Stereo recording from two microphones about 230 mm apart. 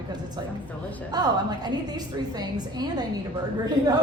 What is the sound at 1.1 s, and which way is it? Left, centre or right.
A woman's voice, centre.